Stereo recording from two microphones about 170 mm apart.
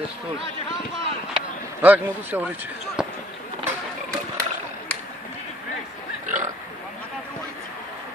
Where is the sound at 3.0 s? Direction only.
5° right (ahead or behind).